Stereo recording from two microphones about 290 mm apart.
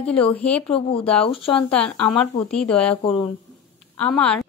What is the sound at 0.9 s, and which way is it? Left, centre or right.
Speech, centre.